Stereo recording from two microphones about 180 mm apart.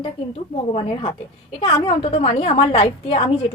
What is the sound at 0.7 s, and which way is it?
A woman's voice, 30° left (ahead or behind).